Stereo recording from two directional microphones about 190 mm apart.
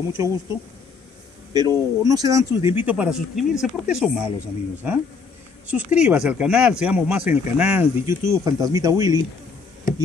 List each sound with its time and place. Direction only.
0.2 s speech: 15° right (ahead or behind)
5.7 s speech: 5° right (ahead or behind)